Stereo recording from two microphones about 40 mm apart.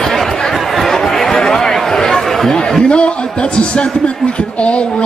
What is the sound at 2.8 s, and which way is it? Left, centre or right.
A man's voice, left.